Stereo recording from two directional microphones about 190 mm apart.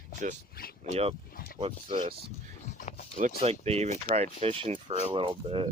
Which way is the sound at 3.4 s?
30° right (ahead or behind).